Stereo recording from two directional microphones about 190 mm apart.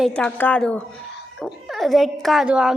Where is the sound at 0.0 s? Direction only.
5° left (ahead or behind).